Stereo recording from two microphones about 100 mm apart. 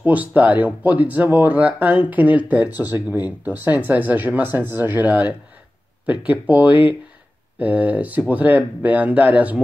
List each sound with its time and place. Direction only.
0.0 s speech: 15° right (ahead or behind)